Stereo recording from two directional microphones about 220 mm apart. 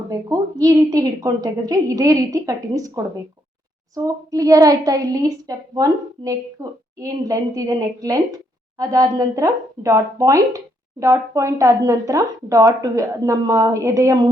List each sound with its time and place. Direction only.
0.1 s a woman's voice: 15° right (ahead or behind)